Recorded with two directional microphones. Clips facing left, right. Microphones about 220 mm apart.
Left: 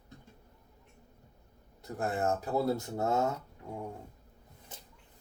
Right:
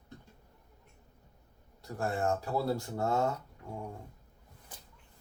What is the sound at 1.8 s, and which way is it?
Speech, 20° left (ahead or behind).